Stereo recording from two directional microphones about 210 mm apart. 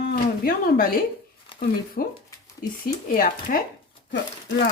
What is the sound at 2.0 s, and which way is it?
Speech, 45° left (ahead or behind).